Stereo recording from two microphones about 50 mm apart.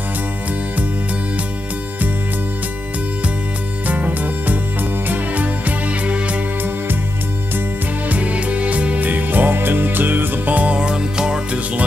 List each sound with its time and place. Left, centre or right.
3.8 s music: right
8.1 s music: right
10.8 s music: centre